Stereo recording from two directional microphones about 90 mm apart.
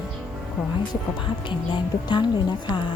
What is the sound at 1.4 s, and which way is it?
A woman's voice, 60° left (ahead or behind).